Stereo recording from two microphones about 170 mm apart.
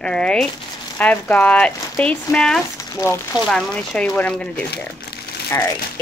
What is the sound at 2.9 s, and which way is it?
Speech, 15° left (ahead or behind).